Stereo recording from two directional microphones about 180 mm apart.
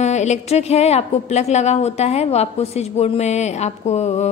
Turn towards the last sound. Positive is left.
turn(degrees=40)  # may be behind; listen again after turning